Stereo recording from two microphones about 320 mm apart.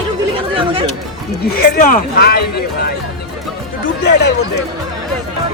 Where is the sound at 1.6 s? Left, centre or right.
Left.